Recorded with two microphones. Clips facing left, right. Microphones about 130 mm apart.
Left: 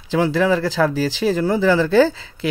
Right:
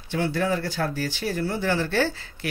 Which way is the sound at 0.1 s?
90° left.